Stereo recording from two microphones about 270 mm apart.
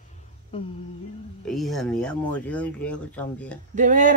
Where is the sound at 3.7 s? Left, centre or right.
Right.